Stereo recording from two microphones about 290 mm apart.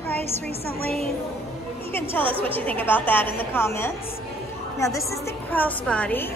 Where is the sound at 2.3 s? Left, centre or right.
Centre.